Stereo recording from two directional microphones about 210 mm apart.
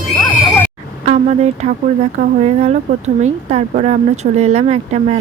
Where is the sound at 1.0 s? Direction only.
30° right (ahead or behind).